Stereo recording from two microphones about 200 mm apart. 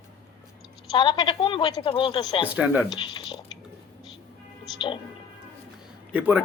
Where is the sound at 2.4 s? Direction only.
5° right (ahead or behind).